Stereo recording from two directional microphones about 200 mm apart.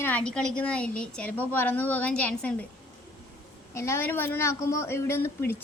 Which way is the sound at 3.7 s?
15° left (ahead or behind).